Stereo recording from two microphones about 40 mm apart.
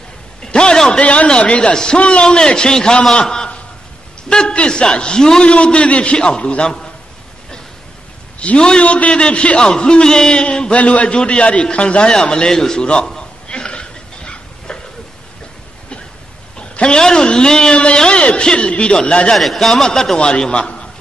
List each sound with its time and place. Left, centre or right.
0.4 s a sound: left
0.9 s a man's voice: left
1.7 s a man's voice: centre
3.2 s a sound: left
4.3 s a man's voice: left
8.4 s a man's voice: left
12.4 s a man's voice: centre
12.8 s a man's voice: left
13.5 s cough: left
16.5 s a man's voice: left
19.3 s a man's voice: centre; by 20.9 s left